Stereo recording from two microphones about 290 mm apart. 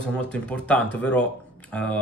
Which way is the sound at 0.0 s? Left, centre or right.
Centre.